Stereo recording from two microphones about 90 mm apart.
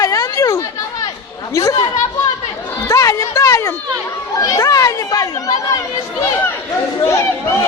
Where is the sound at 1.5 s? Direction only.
35° left (ahead or behind).